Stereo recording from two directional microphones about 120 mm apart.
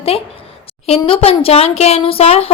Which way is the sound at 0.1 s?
55° left (ahead or behind).